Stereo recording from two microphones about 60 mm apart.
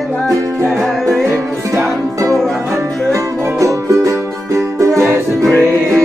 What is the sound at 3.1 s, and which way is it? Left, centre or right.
Music, right.